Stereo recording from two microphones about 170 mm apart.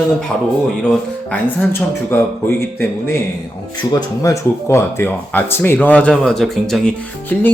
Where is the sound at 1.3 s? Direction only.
15° left (ahead or behind).